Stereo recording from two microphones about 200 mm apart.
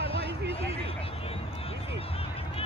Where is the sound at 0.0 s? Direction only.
30° left (ahead or behind).